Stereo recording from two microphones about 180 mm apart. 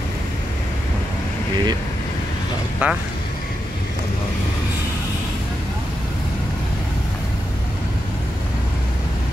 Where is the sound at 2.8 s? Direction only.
10° right (ahead or behind).